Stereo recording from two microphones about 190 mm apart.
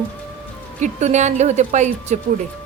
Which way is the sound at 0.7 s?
40° right (ahead or behind).